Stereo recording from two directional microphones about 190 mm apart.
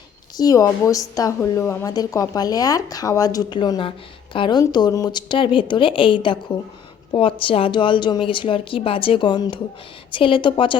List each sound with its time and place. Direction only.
0.3 s a woman's voice: 20° left (ahead or behind)